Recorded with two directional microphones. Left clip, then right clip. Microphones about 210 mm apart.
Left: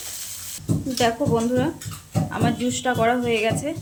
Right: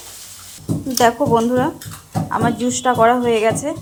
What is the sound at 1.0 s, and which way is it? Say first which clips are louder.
A woman's voice: right 7 dB; 5° right (ahead or behind).